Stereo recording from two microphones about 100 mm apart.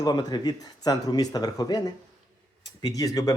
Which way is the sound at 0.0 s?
40° left (ahead or behind).